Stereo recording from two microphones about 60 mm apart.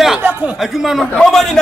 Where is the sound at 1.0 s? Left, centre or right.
Centre.